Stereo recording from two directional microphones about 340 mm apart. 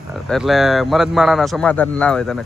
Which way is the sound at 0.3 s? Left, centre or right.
Centre.